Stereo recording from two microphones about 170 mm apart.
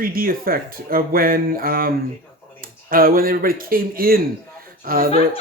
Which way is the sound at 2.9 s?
60° right (ahead or behind).